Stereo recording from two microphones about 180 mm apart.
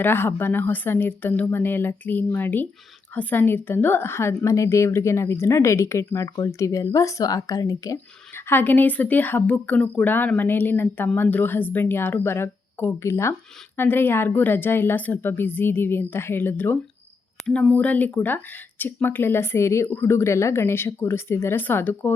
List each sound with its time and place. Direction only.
0.0 s speech: 10° left (ahead or behind)